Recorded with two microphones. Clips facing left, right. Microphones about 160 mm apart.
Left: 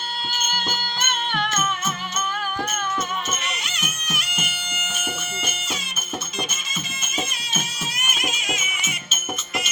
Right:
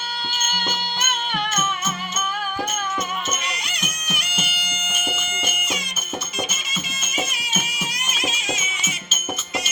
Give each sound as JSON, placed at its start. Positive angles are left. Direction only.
{"t": 1.0, "sound": "music", "side_deg": -5}
{"t": 3.7, "sound": "music", "side_deg": -15}
{"t": 8.2, "sound": "music", "side_deg": -25}